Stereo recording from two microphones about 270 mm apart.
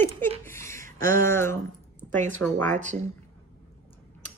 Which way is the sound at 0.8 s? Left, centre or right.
Right.